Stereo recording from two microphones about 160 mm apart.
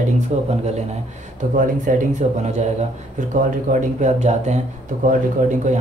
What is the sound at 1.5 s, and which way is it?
Speech, 55° right (ahead or behind).